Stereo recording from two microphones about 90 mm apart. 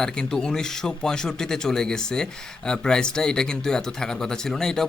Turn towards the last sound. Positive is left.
turn(degrees=5)  # may be behind; listen again after turning